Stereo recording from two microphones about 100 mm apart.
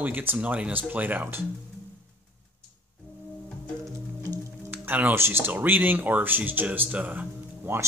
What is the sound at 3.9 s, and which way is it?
Music, 35° right (ahead or behind).